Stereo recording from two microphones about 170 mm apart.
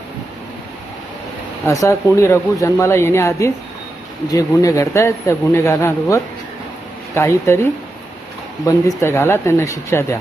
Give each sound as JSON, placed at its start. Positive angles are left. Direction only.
{"t": 1.6, "sound": "a man's voice", "side_deg": 20}
{"t": 9.0, "sound": "a man's voice", "side_deg": 15}